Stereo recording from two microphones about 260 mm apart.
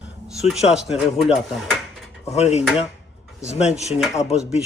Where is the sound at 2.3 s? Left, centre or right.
Left.